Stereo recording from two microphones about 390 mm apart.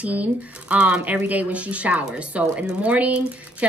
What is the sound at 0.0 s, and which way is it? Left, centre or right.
Speech, centre.